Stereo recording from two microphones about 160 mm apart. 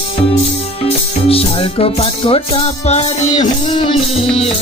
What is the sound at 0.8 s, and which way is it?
Music, 35° left (ahead or behind).